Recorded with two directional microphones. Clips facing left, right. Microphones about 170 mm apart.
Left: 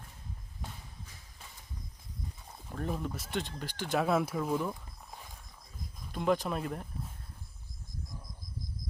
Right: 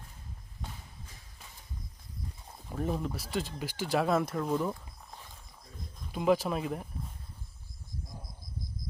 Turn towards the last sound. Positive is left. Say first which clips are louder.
# right 2 dB
turn(degrees=-5)  # may be behind; listen again after turning